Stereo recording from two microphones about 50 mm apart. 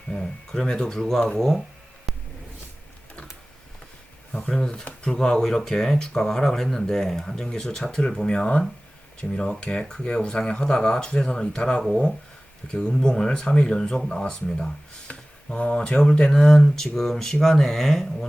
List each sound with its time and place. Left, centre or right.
0.1 s speech: centre
2.1 s a sound: centre
4.3 s speech: centre
15.0 s speech: left